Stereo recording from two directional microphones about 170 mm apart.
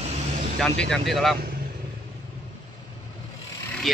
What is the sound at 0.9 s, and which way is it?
Speech, centre (ahead or behind).